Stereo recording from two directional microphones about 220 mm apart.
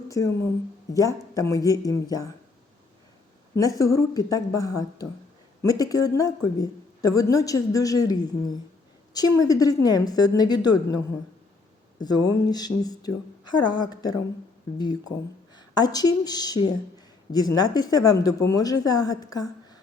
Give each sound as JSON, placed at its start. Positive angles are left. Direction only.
{"t": 0.1, "sound": "a woman's voice", "side_deg": 15}
{"t": 3.5, "sound": "a woman's voice", "side_deg": 15}